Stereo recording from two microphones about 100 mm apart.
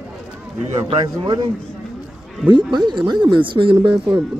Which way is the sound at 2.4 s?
50° right (ahead or behind).